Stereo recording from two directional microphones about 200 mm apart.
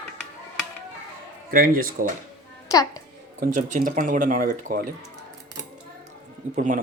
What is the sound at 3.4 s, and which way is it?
Speech, 40° right (ahead or behind).